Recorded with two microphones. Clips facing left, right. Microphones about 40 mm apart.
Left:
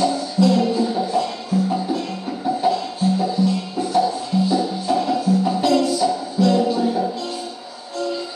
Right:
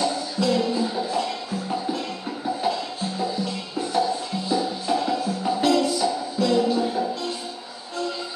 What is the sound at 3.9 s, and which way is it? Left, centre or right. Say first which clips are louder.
Music: left 5 dB; centre.